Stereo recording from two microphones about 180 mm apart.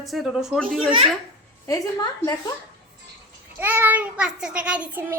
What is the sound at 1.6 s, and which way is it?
Speech, 20° left (ahead or behind).